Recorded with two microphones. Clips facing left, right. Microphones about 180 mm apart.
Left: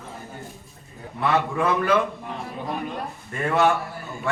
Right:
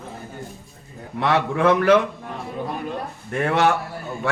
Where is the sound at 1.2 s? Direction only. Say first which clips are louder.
Right 3 dB; 90° right.